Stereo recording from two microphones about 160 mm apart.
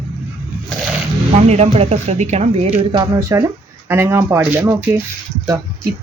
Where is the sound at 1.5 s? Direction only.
40° right (ahead or behind).